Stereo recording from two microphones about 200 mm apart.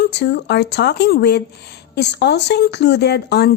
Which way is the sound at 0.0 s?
55° left (ahead or behind).